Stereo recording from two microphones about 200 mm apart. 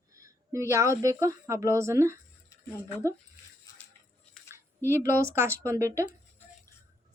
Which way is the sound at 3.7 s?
15° left (ahead or behind).